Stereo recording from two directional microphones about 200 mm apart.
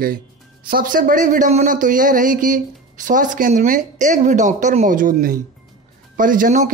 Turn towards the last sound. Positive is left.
turn(degrees=-45)  # may be behind; listen again after turning